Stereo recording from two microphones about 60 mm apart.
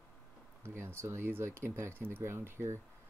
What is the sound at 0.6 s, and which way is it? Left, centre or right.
Speech, right.